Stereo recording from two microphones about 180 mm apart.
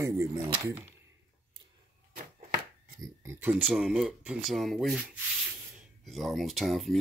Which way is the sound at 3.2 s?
15° right (ahead or behind).